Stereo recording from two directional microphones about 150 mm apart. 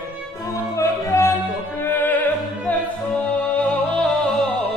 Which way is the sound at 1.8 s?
15° left (ahead or behind).